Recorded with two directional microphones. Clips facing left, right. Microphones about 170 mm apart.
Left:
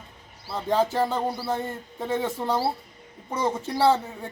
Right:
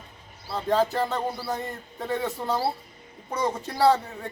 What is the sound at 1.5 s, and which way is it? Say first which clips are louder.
Speech: left 3 dB; 25° left (ahead or behind).